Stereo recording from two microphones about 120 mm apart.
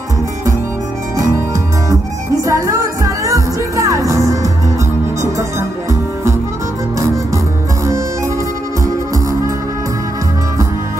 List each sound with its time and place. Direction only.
2.4 s music: 25° right (ahead or behind)